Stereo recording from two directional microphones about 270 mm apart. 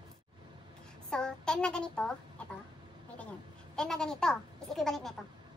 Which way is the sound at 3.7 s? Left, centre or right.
Centre.